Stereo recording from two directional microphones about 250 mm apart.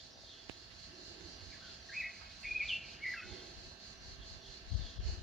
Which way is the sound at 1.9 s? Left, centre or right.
Centre.